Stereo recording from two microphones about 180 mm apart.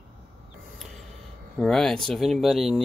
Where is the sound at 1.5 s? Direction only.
5° left (ahead or behind).